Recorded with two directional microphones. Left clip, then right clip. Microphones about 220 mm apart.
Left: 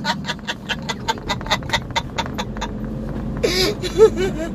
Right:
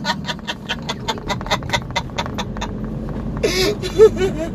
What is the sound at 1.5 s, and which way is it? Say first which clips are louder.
Rodents: even; 5° right (ahead or behind).